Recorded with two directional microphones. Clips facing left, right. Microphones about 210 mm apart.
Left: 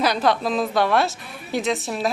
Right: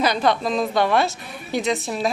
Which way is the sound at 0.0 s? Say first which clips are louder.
Even; centre (ahead or behind).